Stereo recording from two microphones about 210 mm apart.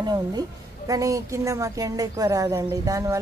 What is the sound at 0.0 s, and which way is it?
A woman's voice, 20° right (ahead or behind).